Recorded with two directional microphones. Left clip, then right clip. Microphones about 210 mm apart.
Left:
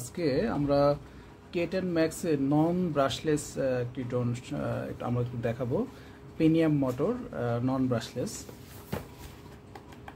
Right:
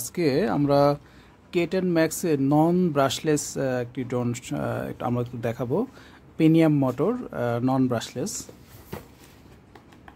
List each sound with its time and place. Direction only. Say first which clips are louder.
0.1 s speech: right 5 dB; 50° right (ahead or behind)